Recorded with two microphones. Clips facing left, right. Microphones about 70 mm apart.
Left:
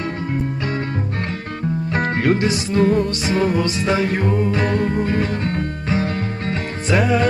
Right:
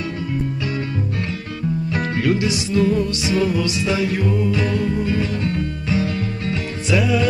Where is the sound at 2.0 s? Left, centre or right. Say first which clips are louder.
Left 3 dB; left.